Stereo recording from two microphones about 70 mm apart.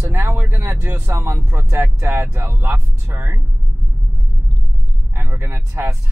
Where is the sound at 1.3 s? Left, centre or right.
Right.